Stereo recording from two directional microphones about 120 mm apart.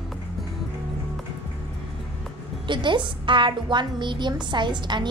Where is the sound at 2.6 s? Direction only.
40° right (ahead or behind).